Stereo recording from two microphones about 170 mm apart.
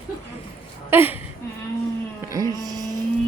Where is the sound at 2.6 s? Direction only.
20° right (ahead or behind).